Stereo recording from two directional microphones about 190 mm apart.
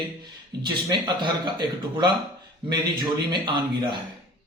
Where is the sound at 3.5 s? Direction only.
25° right (ahead or behind).